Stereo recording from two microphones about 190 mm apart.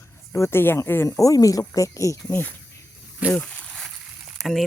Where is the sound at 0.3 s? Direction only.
15° left (ahead or behind).